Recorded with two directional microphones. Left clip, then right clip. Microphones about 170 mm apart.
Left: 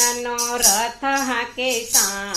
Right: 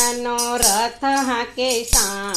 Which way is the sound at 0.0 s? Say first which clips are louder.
Right 1 dB; 35° right (ahead or behind).